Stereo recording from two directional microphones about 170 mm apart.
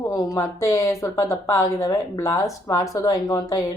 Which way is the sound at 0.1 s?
20° left (ahead or behind).